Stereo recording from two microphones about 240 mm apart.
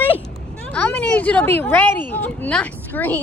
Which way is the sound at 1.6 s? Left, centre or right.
Centre.